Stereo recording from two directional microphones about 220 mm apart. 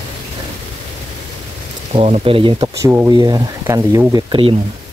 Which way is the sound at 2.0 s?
25° right (ahead or behind).